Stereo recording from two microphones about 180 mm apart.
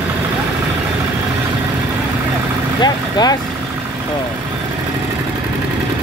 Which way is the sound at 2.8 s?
20° left (ahead or behind).